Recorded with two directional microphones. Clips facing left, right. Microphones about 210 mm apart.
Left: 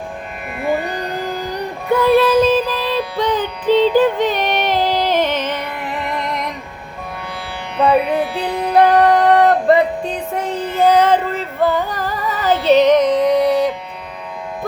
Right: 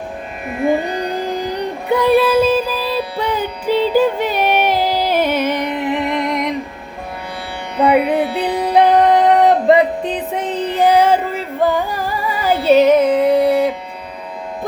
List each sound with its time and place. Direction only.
1.9 s music: 15° right (ahead or behind)
7.8 s music: 15° right (ahead or behind)